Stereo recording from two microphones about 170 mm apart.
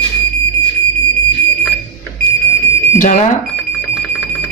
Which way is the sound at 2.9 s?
50° left (ahead or behind).